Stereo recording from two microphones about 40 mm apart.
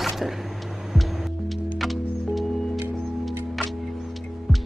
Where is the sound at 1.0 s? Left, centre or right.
Centre.